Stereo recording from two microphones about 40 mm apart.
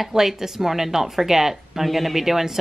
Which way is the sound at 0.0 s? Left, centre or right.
Centre.